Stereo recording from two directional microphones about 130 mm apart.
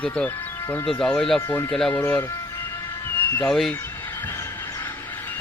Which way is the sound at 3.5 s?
Centre (ahead or behind).